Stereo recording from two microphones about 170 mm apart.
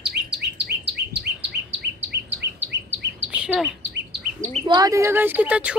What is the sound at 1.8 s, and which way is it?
Chirp, 80° right.